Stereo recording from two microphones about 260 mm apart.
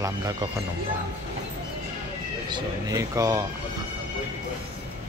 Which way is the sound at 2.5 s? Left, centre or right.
Centre.